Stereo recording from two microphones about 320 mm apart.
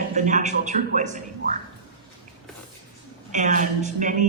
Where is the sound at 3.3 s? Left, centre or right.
Right.